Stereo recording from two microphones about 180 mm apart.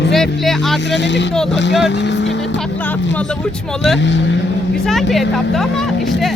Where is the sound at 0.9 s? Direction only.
75° left (ahead or behind).